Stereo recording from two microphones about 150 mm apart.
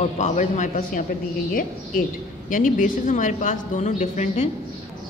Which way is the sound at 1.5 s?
65° left (ahead or behind).